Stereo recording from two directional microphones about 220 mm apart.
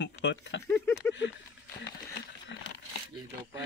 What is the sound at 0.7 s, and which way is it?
Speech, 10° left (ahead or behind).